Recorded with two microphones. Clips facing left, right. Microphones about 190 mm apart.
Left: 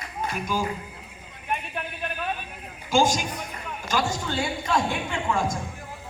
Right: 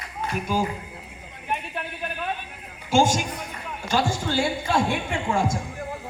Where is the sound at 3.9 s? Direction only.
30° right (ahead or behind).